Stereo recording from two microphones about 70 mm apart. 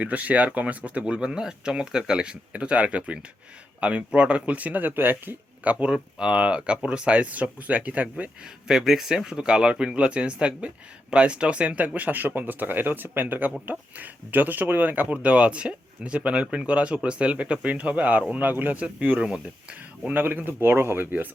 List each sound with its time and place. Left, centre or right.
0.0 s speech: right
5.8 s speech: centre